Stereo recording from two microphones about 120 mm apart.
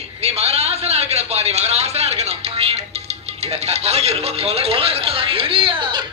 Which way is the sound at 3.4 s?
60° right (ahead or behind).